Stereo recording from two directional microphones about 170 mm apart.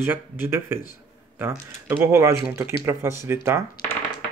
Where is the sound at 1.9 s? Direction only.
15° right (ahead or behind).